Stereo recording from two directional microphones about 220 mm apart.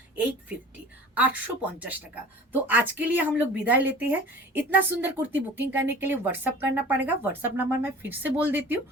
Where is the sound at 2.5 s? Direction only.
10° right (ahead or behind).